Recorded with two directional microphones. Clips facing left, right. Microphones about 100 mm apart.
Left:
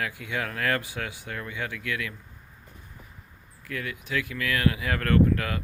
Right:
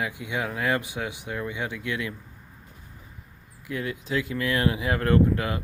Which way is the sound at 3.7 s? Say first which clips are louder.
Right 3 dB; 25° right (ahead or behind).